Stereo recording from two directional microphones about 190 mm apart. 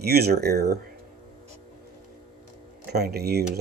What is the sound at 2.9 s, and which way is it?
Speech, 55° right (ahead or behind).